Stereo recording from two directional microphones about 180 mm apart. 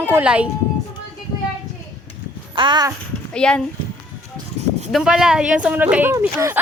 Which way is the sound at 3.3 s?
5° left (ahead or behind).